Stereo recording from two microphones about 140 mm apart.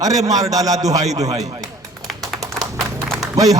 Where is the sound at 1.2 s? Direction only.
50° right (ahead or behind).